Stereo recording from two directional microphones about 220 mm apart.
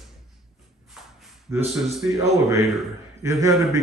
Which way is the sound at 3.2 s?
15° right (ahead or behind).